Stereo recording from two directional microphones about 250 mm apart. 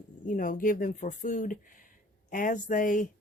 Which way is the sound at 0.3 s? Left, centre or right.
Left.